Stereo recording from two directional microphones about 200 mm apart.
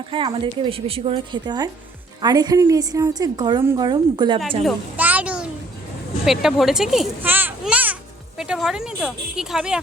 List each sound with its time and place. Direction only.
0.1 s a woman's voice: 25° right (ahead or behind)
4.6 s a sound: 10° right (ahead or behind)
6.2 s a child's voice: centre (ahead or behind)